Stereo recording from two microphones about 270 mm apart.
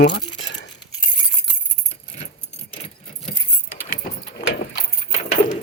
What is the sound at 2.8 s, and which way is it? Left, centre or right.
Keys jangling, left.